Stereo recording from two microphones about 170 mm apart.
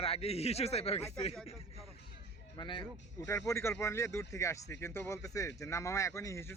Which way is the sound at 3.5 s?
15° left (ahead or behind).